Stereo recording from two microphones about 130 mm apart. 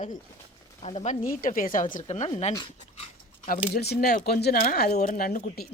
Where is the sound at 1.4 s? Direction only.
90° left.